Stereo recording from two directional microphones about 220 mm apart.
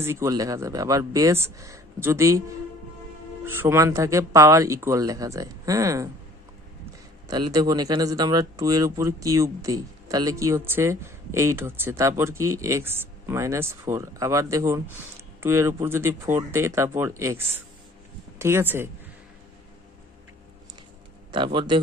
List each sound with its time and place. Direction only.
0.0 s speech: 10° right (ahead or behind)
3.4 s speech: 10° right (ahead or behind)
7.3 s speech: 20° right (ahead or behind)
21.3 s a man's voice: 20° right (ahead or behind)